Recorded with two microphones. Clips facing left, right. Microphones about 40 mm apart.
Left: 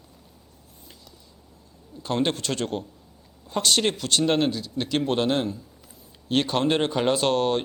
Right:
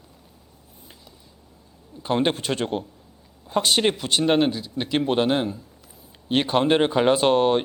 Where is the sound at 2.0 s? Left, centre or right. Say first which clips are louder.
Right 3 dB; centre.